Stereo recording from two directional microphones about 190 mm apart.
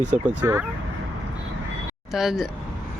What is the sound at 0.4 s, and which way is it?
Speech, 15° right (ahead or behind).